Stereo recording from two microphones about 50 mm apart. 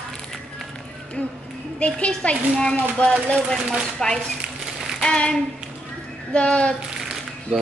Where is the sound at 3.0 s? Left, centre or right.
Left.